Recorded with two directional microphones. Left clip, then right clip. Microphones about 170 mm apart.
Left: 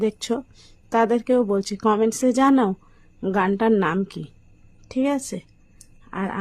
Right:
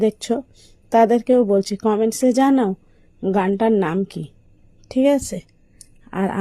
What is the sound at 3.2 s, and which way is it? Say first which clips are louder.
Speech: right 4 dB; centre (ahead or behind).